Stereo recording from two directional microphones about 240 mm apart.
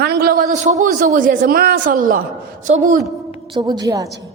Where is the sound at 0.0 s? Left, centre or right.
Right.